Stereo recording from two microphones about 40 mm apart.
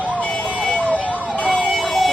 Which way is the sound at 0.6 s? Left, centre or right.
Left.